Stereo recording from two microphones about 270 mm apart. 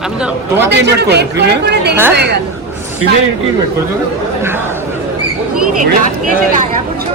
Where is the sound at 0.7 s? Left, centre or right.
Right.